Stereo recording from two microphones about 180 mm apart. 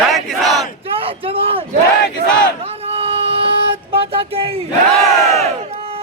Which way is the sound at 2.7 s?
35° right (ahead or behind).